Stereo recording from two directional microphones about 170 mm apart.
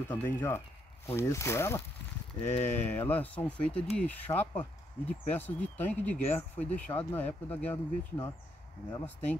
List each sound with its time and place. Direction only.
0.1 s speech: 10° left (ahead or behind)
2.4 s speech: 40° left (ahead or behind)
2.9 s speech: 10° left (ahead or behind)